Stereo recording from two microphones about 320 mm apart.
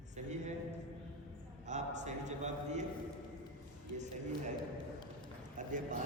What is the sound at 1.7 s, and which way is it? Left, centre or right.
A man's voice, right.